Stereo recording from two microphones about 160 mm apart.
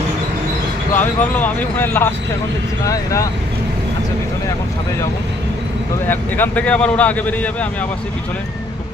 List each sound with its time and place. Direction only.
0.9 s speech: 10° left (ahead or behind)
6.1 s speech: 10° left (ahead or behind)